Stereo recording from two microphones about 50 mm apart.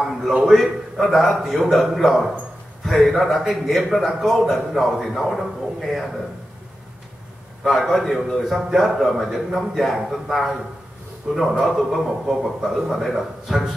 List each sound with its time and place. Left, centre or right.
0.0 s a sound: centre
0.4 s a man's voice: centre
7.6 s a man's voice: centre